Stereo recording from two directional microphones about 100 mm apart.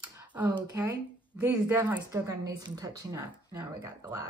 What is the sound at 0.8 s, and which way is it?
Speech, 25° right (ahead or behind).